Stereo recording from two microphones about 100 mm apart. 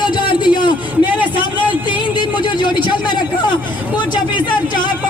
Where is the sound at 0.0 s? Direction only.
50° left (ahead or behind).